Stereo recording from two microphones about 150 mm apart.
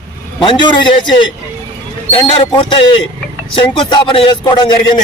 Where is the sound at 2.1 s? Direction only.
35° left (ahead or behind).